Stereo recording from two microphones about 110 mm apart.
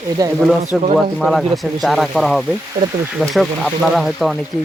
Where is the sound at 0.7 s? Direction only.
Centre (ahead or behind).